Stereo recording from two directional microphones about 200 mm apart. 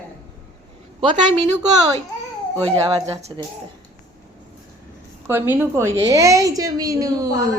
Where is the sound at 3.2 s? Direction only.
30° right (ahead or behind).